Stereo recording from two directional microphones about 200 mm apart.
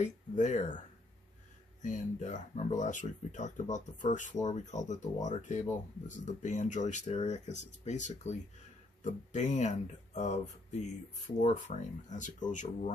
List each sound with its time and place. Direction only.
0.0 s speech: 35° left (ahead or behind)